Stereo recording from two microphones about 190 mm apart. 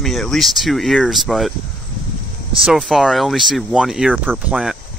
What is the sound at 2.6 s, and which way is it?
Speech, centre (ahead or behind).